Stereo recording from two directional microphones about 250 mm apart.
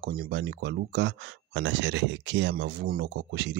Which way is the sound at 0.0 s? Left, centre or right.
Right.